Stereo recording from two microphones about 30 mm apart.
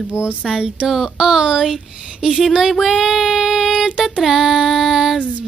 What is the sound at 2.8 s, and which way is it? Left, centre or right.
Child singing, centre.